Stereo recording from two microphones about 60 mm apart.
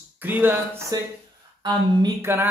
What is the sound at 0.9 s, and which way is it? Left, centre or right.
Speech, right.